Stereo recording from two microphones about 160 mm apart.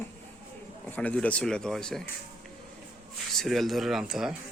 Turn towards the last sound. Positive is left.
turn(degrees=-5)  # may be behind; listen again after turning